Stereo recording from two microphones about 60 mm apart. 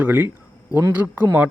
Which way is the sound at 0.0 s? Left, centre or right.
Right.